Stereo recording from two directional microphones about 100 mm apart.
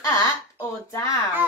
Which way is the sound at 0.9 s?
30° left (ahead or behind).